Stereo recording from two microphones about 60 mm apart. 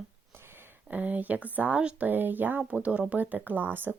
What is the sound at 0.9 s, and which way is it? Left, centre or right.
Speech, right.